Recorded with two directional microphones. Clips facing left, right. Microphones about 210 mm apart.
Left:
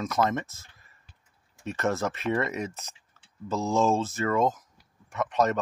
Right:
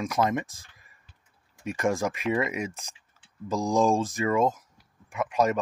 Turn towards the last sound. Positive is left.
turn(degrees=-10)  # may be behind; listen again after turning